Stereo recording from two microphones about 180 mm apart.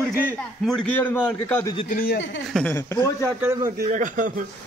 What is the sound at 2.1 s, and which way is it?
Speech, 80° left.